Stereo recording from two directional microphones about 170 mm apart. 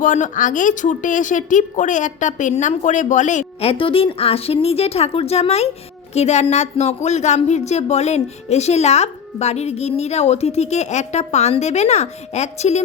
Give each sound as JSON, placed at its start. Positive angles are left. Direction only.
{"t": 0.0, "sound": "a woman's voice", "side_deg": 50}